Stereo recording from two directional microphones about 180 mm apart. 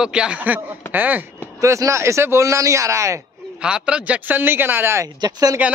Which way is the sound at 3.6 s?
5° right (ahead or behind).